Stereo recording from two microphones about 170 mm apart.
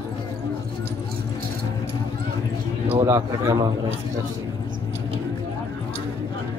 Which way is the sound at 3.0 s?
15° right (ahead or behind).